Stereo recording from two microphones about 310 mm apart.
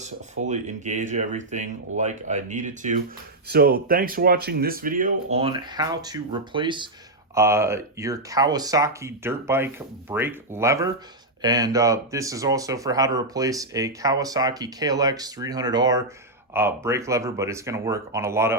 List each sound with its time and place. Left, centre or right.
0.0 s speech: right